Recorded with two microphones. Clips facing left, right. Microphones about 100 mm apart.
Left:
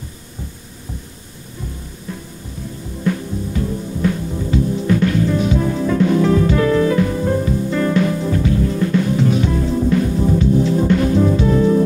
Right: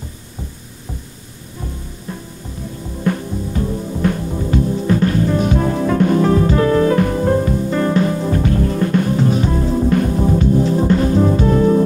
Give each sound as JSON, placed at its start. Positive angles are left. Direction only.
{"t": 3.0, "sound": "music", "side_deg": -45}
{"t": 4.8, "sound": "music", "side_deg": -35}
{"t": 5.5, "sound": "music", "side_deg": -50}
{"t": 8.4, "sound": "music", "side_deg": -50}
{"t": 9.8, "sound": "music", "side_deg": -45}
{"t": 11.3, "sound": "music", "side_deg": -40}